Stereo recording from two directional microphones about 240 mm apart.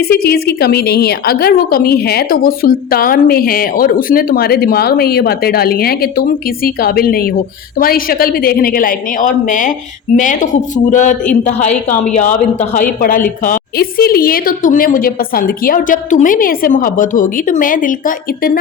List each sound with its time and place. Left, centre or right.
0.0 s a woman's voice: left